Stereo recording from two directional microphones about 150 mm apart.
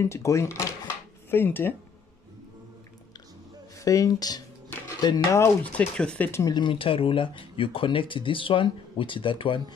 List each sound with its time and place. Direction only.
0.0 s speech: 20° left (ahead or behind)
3.8 s speech: 20° left (ahead or behind)
5.6 s speech: 10° left (ahead or behind)
6.4 s speech: 30° left (ahead or behind)